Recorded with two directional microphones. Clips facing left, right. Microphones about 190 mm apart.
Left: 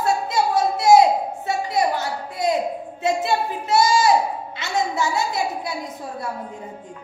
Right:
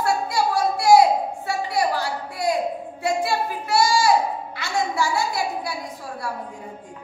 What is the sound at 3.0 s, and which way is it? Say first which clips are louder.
A woman's voice: left 2 dB; 20° left (ahead or behind).